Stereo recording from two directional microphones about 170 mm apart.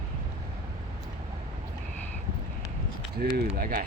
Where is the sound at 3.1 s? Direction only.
65° right (ahead or behind).